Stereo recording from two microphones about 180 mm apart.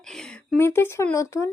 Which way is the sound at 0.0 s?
5° left (ahead or behind).